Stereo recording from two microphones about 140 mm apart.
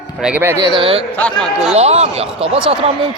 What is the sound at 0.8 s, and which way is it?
Speech, 40° right (ahead or behind).